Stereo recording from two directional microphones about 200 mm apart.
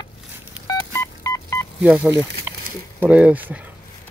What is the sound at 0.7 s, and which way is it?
Telephone dialing, 15° left (ahead or behind).